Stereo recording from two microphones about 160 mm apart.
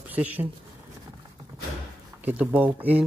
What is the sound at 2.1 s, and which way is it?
Speech, 10° right (ahead or behind).